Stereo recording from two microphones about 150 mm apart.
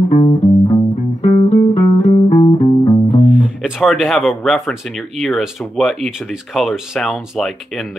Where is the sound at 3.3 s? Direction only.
10° right (ahead or behind).